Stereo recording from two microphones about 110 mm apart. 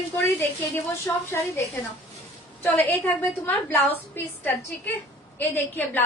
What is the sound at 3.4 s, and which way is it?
A woman's voice, 20° left (ahead or behind).